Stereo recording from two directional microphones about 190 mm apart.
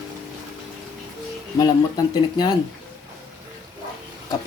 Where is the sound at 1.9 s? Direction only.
20° left (ahead or behind).